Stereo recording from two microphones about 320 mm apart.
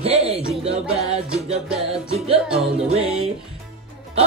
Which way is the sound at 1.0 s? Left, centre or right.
Centre.